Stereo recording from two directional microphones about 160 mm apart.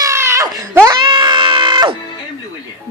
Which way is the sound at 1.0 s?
30° right (ahead or behind).